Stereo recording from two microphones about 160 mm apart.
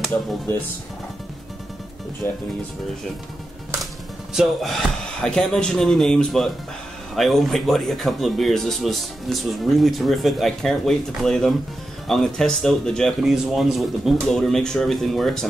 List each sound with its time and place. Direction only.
2.2 s speech: 15° left (ahead or behind)
4.3 s speech: centre (ahead or behind)